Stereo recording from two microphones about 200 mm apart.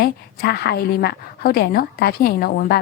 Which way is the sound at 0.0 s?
50° left (ahead or behind).